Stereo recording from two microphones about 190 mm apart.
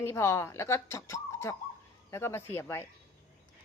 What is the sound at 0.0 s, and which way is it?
Speech, 15° left (ahead or behind).